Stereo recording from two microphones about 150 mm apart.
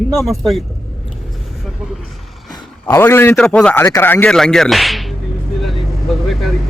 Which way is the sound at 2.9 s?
15° left (ahead or behind).